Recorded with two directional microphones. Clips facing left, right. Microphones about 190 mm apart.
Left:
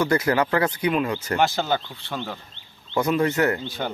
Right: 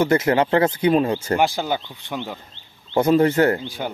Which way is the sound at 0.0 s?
25° right (ahead or behind).